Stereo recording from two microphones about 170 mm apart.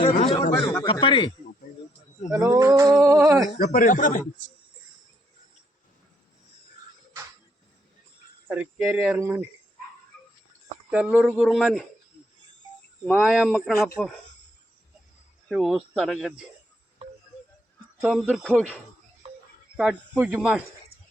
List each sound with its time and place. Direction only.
0.3 s a sound: 30° left (ahead or behind)
0.9 s speech: 30° left (ahead or behind)
2.3 s a sound: 20° right (ahead or behind)
3.6 s speech: 50° left (ahead or behind)
8.4 s speech: 10° right (ahead or behind)
10.9 s speech: 10° right (ahead or behind)
13.1 s speech: 5° right (ahead or behind)
15.4 s speech: centre (ahead or behind)
17.0 s music: 35° right (ahead or behind)
18.0 s speech: centre (ahead or behind)
18.5 s speech: 10° right (ahead or behind)